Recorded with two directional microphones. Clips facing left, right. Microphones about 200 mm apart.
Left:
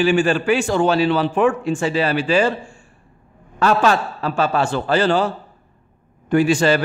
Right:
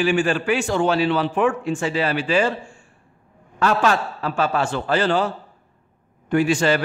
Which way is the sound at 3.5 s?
30° left (ahead or behind).